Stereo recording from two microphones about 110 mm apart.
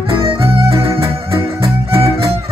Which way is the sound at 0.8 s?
60° right (ahead or behind).